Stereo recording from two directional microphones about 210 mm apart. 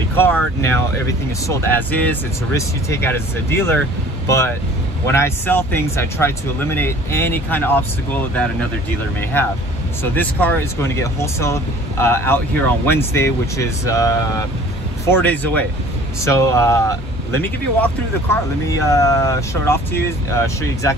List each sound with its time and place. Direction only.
0.1 s speech: 10° left (ahead or behind)
5.0 s speech: 10° left (ahead or behind)